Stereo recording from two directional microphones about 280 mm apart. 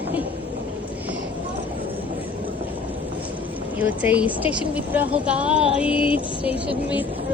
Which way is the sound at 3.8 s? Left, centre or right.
Centre.